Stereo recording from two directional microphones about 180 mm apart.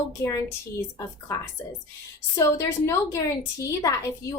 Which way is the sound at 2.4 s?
15° left (ahead or behind).